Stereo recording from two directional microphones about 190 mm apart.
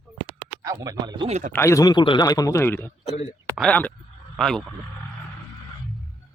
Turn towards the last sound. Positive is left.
turn(degrees=0)  # may be behind; listen again after turning